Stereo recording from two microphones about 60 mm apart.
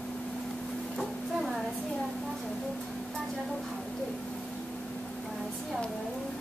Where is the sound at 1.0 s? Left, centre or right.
Centre.